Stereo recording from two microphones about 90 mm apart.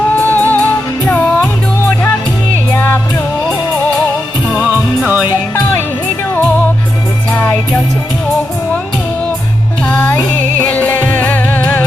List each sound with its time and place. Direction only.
0.2 s music: 20° left (ahead or behind)
2.7 s music: 25° left (ahead or behind)
4.7 s music: 20° right (ahead or behind)
7.3 s music: 20° left (ahead or behind)
9.8 s music: 25° left (ahead or behind)